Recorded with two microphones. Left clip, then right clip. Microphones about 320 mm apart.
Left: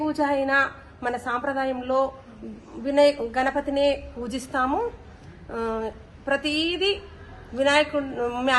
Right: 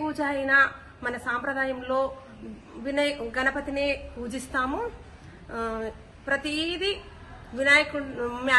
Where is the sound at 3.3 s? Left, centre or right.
Centre.